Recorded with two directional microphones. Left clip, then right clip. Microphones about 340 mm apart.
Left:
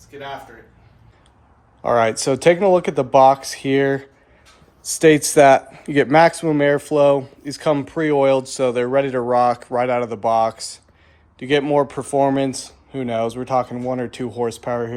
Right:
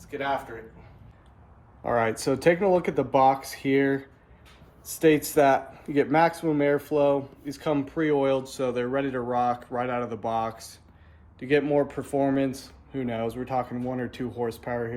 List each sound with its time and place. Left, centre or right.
0.1 s speech: centre
1.8 s a man's voice: left